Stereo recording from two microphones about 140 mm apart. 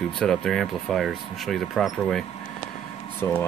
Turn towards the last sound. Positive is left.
turn(degrees=15)  # may be behind; listen again after turning